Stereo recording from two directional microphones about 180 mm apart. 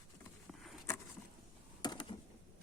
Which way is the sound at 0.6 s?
Centre (ahead or behind).